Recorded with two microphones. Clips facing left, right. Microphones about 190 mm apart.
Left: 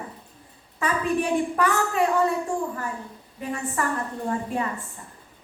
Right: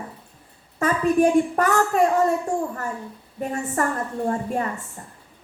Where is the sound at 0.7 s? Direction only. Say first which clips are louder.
Right 5 dB; 45° right (ahead or behind).